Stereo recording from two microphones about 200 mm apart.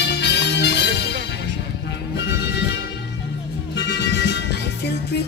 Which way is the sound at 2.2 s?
60° left (ahead or behind).